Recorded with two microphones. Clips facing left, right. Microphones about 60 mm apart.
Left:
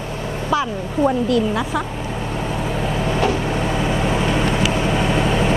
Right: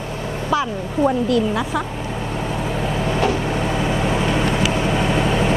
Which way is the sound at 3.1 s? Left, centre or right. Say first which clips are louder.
Even; left.